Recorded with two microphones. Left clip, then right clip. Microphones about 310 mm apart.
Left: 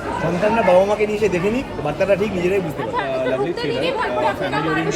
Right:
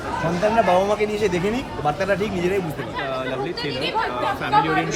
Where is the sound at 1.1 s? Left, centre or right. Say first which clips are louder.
Left 3 dB; right.